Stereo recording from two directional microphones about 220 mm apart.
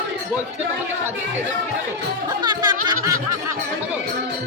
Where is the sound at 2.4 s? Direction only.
20° right (ahead or behind).